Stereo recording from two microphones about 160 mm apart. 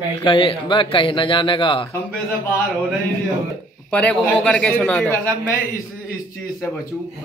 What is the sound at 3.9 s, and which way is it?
A man's voice, 5° left (ahead or behind).